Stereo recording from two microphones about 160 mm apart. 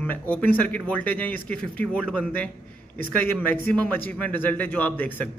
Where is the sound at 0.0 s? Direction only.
10° left (ahead or behind).